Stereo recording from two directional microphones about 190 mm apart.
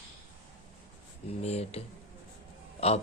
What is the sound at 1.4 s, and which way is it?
Speech, 35° left (ahead or behind).